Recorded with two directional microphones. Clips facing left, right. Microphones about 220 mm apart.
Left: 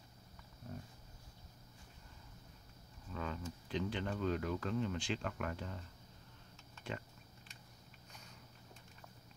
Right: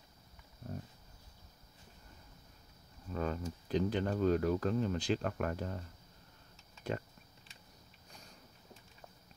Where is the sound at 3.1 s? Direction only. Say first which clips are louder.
Right 6 dB; 45° right (ahead or behind).